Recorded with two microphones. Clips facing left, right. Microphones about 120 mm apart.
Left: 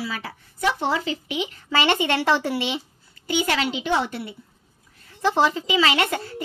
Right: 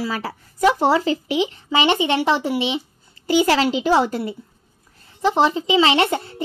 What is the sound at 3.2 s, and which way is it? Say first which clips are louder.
Speech: right 7 dB; 35° right (ahead or behind).